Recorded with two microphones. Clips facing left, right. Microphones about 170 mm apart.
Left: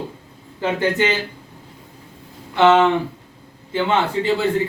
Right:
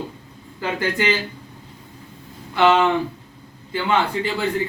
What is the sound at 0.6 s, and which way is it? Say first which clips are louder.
Speech: left 3 dB; 25° left (ahead or behind).